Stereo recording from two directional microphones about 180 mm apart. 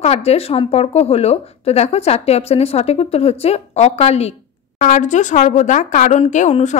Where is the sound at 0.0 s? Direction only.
35° left (ahead or behind).